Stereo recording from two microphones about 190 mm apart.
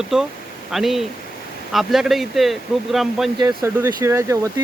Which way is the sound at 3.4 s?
15° right (ahead or behind).